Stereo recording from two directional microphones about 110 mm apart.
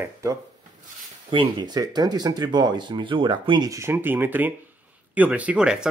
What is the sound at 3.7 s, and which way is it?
Speech, 25° right (ahead or behind).